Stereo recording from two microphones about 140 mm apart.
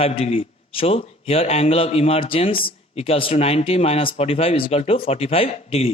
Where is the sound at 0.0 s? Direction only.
45° left (ahead or behind).